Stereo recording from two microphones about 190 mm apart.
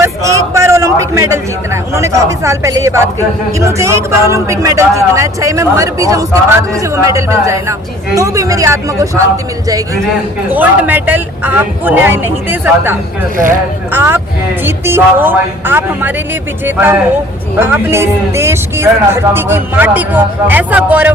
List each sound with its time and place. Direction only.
0.0 s speech: 15° right (ahead or behind)